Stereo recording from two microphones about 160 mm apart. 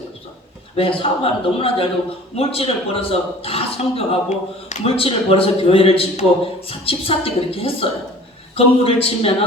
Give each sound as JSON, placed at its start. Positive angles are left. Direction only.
{"t": 0.8, "sound": "a man's voice", "side_deg": 35}